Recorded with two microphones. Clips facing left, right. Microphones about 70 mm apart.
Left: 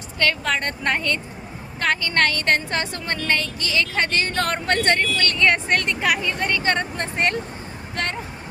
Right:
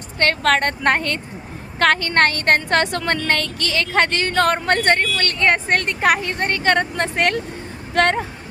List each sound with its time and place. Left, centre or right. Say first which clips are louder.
0.4 s speech: right 6 dB; right
7.9 s speech: right 10 dB; right